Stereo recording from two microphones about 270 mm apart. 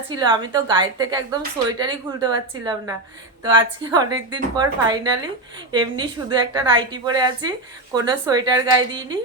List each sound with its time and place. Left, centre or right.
0.2 s a woman's voice: centre